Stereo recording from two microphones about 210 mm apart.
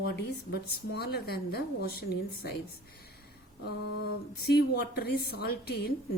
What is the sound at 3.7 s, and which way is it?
Speech, 50° left (ahead or behind).